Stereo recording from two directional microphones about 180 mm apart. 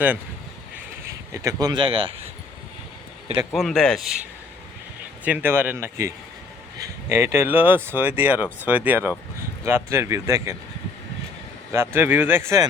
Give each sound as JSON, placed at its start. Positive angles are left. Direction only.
{"t": 1.0, "sound": "speech", "side_deg": -20}
{"t": 3.5, "sound": "speech", "side_deg": 0}
{"t": 5.2, "sound": "speech", "side_deg": -10}
{"t": 11.9, "sound": "speech", "side_deg": -10}